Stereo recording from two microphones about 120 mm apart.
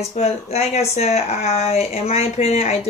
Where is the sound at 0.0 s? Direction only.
60° left (ahead or behind).